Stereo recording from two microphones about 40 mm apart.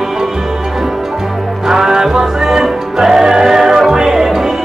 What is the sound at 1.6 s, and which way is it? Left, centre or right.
Music, centre.